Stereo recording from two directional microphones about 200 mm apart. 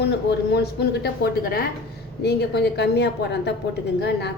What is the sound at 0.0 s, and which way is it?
Speech, 55° left (ahead or behind).